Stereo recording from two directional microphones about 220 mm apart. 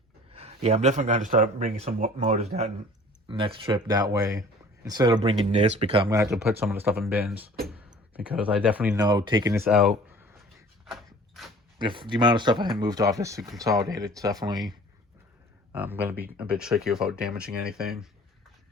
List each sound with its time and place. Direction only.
0.3 s speech: 30° right (ahead or behind); by 9.0 s 5° right (ahead or behind)
9.0 s speech: 20° right (ahead or behind)
9.6 s speech: centre (ahead or behind)
10.8 s a sound: centre (ahead or behind)
11.8 s speech: 20° right (ahead or behind)
15.7 s speech: 10° right (ahead or behind)